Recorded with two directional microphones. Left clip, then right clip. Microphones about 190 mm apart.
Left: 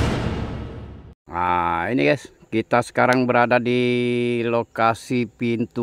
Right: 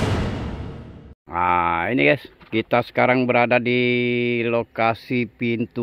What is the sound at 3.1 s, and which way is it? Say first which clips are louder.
Speech: even; 5° left (ahead or behind).